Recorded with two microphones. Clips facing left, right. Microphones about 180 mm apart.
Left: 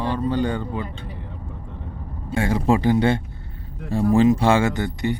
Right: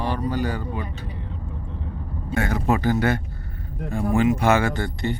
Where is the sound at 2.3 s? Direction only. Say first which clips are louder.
Left 3 dB; 25° left (ahead or behind).